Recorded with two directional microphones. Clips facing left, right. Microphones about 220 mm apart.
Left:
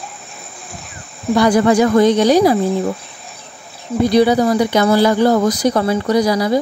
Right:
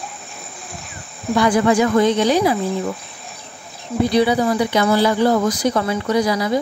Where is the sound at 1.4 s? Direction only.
40° left (ahead or behind).